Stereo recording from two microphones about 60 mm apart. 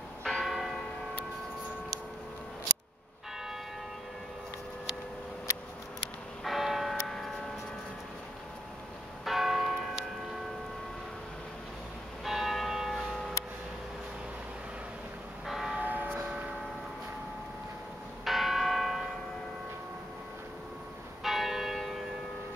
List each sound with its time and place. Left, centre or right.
0.2 s church bell: centre
6.4 s church bell: centre
9.2 s church bell: centre
12.3 s church bell: centre
15.4 s church bell: centre
15.8 s a sound: right
18.2 s church bell: centre
21.2 s church bell: centre